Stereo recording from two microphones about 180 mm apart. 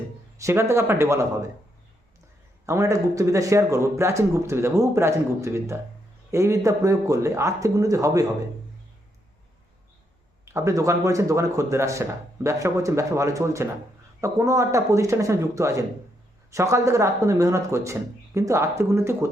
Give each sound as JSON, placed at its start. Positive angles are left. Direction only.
{"t": 0.3, "sound": "speech", "side_deg": -15}
{"t": 2.6, "sound": "speech", "side_deg": -15}
{"t": 10.4, "sound": "speech", "side_deg": -15}